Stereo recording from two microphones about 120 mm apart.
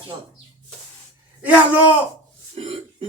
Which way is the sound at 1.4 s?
10° right (ahead or behind).